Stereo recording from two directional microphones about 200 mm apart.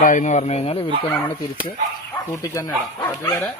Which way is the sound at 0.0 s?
40° left (ahead or behind).